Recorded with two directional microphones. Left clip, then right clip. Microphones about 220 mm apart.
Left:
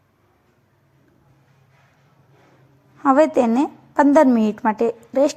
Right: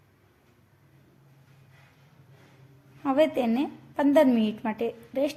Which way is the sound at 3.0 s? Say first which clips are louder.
Left 9 dB; 25° left (ahead or behind).